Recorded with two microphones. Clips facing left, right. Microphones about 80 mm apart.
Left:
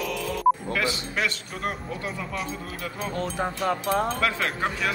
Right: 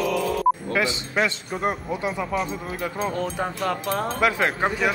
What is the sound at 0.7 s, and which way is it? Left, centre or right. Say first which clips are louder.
A man's voice: right 4 dB; right.